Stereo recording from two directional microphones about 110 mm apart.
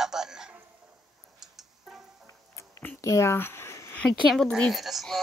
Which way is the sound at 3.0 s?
25° left (ahead or behind).